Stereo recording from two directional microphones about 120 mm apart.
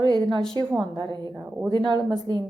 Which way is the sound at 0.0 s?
40° right (ahead or behind).